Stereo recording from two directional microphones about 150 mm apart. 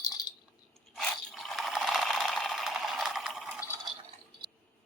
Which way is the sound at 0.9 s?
Centre (ahead or behind).